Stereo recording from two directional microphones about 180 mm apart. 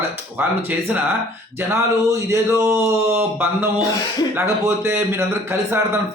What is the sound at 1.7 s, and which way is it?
Speech, 15° right (ahead or behind).